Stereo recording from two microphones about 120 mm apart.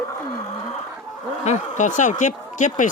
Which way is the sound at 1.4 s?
80° left.